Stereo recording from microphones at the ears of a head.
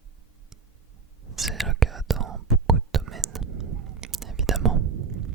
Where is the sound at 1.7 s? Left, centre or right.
Right.